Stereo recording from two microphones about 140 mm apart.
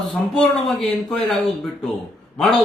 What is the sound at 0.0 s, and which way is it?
Speech, centre (ahead or behind).